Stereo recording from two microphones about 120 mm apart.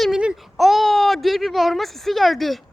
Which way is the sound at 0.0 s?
5° right (ahead or behind).